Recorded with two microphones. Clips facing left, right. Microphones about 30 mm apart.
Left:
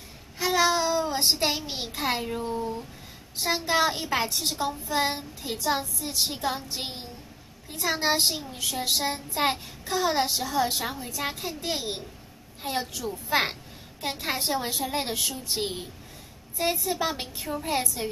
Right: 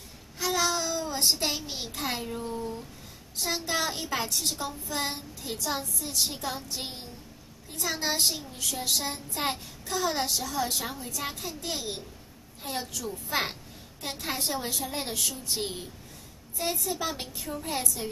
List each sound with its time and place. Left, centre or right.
0.4 s a child's voice: left